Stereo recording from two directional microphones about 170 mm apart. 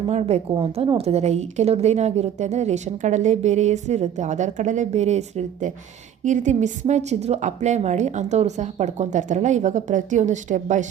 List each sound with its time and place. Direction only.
0.1 s a woman's voice: 40° right (ahead or behind)